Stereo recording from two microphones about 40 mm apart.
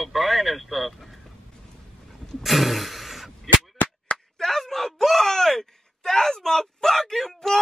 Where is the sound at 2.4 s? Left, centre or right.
Centre.